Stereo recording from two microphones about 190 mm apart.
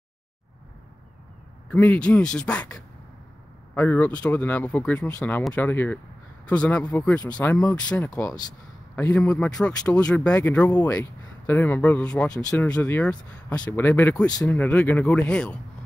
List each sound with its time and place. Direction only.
1.7 s speech: 5° left (ahead or behind)
7.3 s speech: 5° left (ahead or behind)
8.2 s speech: 20° left (ahead or behind)